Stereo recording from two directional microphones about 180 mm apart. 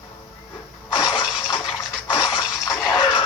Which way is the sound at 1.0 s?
Centre (ahead or behind).